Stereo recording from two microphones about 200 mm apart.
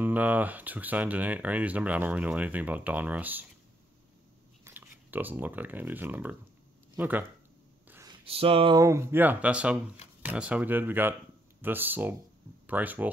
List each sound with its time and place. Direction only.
0.0 s speech: 10° right (ahead or behind)
4.6 s speech: 10° right (ahead or behind)
7.9 s a sound: 15° right (ahead or behind)
8.3 s speech: 30° right (ahead or behind); by 13.1 s 10° right (ahead or behind)